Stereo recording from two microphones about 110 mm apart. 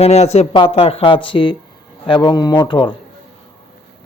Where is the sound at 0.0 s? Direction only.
75° left (ahead or behind).